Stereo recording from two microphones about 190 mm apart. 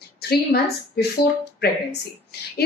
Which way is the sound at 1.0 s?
55° left (ahead or behind).